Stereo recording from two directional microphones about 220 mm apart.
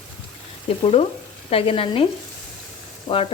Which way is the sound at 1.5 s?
25° left (ahead or behind).